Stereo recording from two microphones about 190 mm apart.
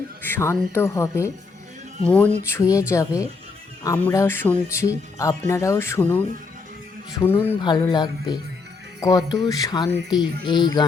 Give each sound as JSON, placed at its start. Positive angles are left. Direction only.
{"t": 0.2, "sound": "speech", "side_deg": 10}
{"t": 7.6, "sound": "speech", "side_deg": 25}